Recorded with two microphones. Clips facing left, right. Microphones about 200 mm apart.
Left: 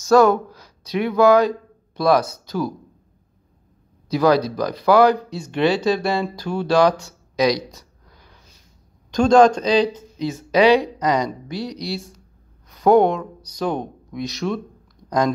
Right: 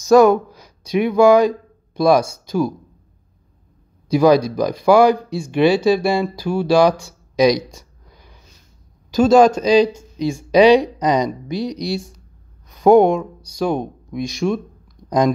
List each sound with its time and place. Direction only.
0.1 s speech: 10° right (ahead or behind)
4.1 s speech: 15° right (ahead or behind)